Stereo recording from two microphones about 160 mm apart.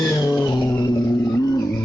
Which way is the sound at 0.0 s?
20° left (ahead or behind).